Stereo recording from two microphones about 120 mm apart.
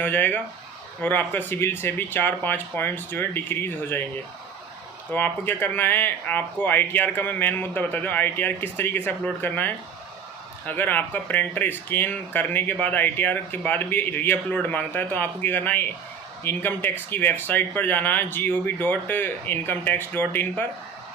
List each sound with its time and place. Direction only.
0.0 s speech: 15° left (ahead or behind)
5.1 s speech: 15° left (ahead or behind)